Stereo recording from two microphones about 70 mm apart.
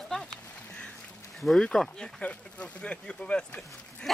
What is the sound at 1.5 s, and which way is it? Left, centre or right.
Speech, centre.